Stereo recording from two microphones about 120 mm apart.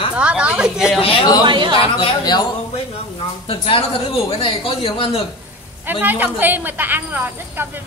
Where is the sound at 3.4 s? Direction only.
50° left (ahead or behind).